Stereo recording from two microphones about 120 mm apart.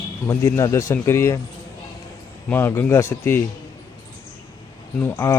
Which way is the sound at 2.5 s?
20° left (ahead or behind).